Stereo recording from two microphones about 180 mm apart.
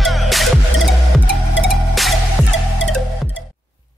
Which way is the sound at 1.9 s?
Centre (ahead or behind).